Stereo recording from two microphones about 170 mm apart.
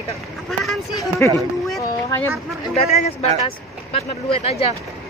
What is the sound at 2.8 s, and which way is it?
Speech, 40° left (ahead or behind).